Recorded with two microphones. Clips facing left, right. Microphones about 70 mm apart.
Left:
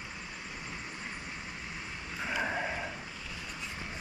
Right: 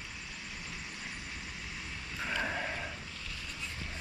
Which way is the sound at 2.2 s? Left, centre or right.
Centre.